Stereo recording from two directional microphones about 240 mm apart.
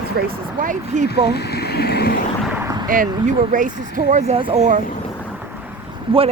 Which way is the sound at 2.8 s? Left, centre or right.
Right.